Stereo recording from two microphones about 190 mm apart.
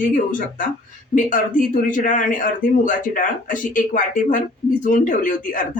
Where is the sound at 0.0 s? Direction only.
45° left (ahead or behind).